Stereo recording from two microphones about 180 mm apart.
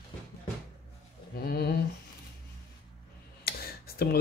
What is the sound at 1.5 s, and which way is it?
Speech, 65° left (ahead or behind).